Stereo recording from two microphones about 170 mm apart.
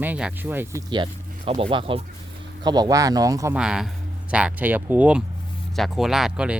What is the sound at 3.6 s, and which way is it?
Speech, 5° right (ahead or behind).